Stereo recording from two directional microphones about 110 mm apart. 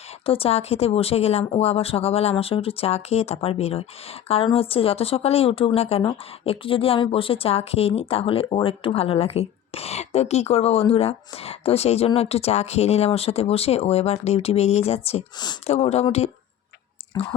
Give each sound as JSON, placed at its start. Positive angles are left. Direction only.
{"t": 0.3, "sound": "speech", "side_deg": 60}
{"t": 17.1, "sound": "speech", "side_deg": 35}